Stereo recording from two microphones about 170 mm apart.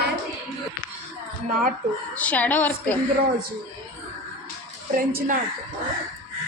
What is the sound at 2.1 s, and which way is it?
Speech, 10° left (ahead or behind).